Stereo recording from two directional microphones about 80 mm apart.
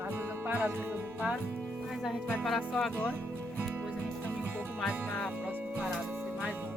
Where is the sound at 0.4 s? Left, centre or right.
Right.